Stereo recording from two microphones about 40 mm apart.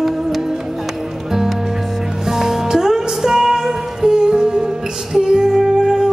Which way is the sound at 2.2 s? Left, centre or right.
Centre.